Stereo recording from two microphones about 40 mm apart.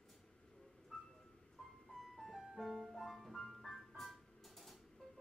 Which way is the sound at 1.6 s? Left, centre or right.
Centre.